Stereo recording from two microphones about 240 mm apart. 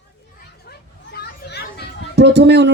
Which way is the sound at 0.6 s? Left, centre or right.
Left.